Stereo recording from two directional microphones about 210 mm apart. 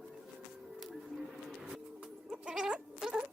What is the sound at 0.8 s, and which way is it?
Goat, centre (ahead or behind).